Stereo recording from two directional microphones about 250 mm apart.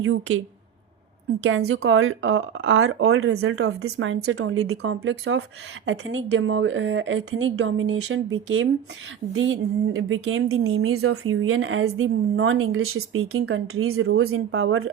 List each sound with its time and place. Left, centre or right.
0.0 s speech: right
1.5 s speech: right
4.8 s speech: right